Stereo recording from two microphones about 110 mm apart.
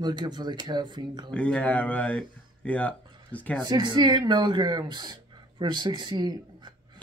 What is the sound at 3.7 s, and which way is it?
Speech, 40° right (ahead or behind).